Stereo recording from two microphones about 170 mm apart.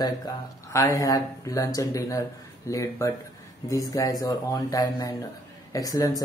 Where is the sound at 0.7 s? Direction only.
20° left (ahead or behind).